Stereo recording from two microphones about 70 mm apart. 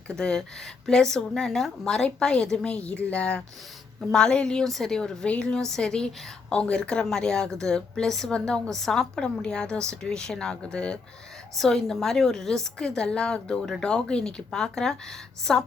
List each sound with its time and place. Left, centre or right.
0.2 s a woman's voice: centre